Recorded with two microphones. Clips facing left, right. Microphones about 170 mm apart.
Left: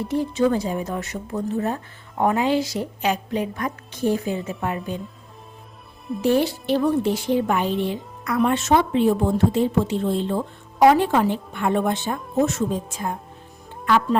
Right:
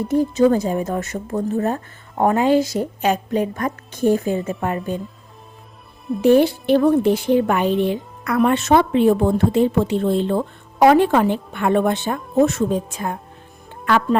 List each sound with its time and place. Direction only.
0.1 s a woman's voice: 45° right (ahead or behind)
6.2 s a woman's voice: 55° right (ahead or behind)